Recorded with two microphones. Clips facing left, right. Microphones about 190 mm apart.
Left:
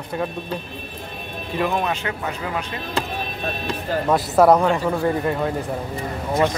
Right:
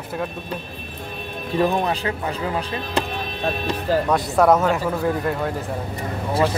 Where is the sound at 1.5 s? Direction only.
35° right (ahead or behind).